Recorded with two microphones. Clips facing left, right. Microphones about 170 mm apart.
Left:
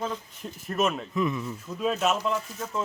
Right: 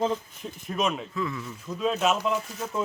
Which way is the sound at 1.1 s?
20° left (ahead or behind).